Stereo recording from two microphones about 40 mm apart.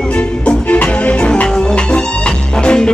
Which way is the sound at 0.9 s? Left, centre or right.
Left.